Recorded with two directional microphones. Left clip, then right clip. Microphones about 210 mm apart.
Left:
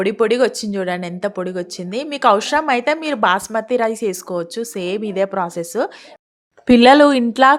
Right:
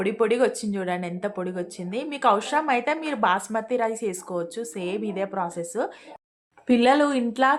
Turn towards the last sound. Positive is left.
turn(degrees=40)  # may be behind; listen again after turning